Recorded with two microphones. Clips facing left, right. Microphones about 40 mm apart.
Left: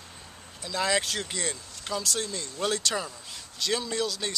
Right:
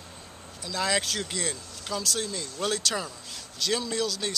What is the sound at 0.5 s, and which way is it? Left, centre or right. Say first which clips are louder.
Speech: left 1 dB; centre.